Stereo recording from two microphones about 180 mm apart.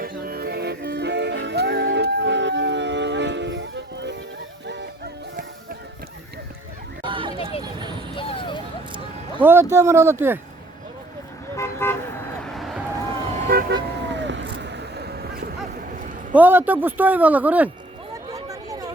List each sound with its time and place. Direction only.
0.0 s music: 55° right (ahead or behind); by 4.9 s 75° right (ahead or behind)
7.0 s a sound: 25° right (ahead or behind)
8.1 s music: 30° left (ahead or behind)
9.4 s speech: 10° right (ahead or behind)
11.5 s vehicle: 15° left (ahead or behind)
12.4 s a sound: centre (ahead or behind)
13.0 s vehicle: 35° right (ahead or behind)
13.5 s vehicle: 55° right (ahead or behind)
13.7 s vehicle: 80° right; by 16.0 s 55° right (ahead or behind)
16.3 s speech: 10° right (ahead or behind)
18.4 s chatter: 20° right (ahead or behind)